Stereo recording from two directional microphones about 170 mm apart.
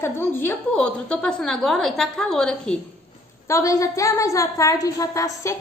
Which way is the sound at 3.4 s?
20° left (ahead or behind).